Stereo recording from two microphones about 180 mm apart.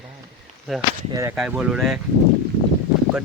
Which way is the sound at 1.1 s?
15° right (ahead or behind).